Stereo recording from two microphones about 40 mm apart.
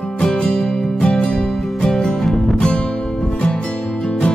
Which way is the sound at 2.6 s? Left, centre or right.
Left.